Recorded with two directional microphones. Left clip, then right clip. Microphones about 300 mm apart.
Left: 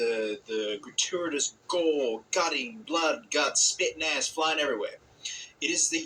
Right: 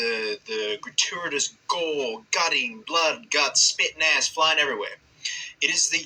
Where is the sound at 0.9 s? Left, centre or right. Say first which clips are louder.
Right 4 dB; right.